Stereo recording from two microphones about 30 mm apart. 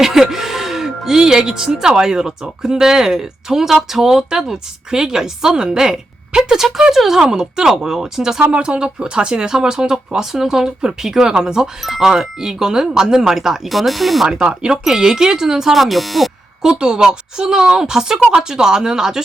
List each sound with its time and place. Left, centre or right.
0.0 s music: centre
1.5 s a woman's voice: centre
8.5 s a woman's voice: right
11.9 s speech: centre
13.7 s speech: centre
14.3 s a woman's voice: right
15.7 s speech: centre
16.8 s a woman's voice: right